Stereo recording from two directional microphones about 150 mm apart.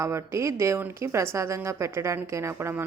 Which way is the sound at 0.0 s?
20° right (ahead or behind).